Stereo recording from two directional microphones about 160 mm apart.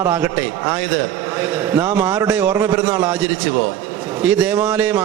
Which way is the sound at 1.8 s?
10° right (ahead or behind).